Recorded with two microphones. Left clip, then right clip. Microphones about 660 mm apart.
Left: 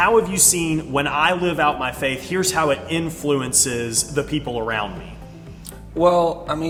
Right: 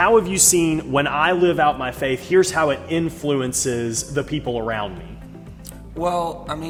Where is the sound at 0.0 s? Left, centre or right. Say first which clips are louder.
Right 1 dB; right.